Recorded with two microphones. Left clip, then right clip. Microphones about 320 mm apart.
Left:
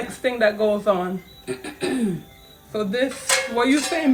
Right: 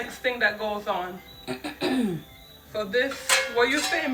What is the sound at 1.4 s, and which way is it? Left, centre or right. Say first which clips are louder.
Music: even; centre.